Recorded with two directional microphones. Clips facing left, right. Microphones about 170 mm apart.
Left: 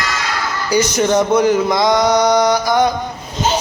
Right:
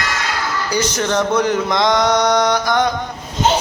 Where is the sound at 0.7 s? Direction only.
10° left (ahead or behind).